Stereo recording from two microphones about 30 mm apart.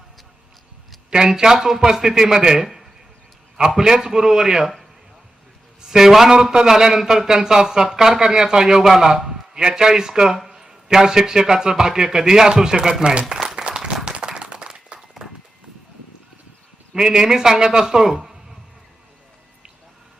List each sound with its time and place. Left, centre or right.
1.3 s a man's voice: centre
3.8 s a man's voice: right
5.8 s a man's voice: centre
6.3 s a man's voice: right
8.8 s a man's voice: centre; by 13.5 s right
13.6 s applause: right
14.0 s clapping: right
15.2 s a sound: centre
17.0 s a man's voice: right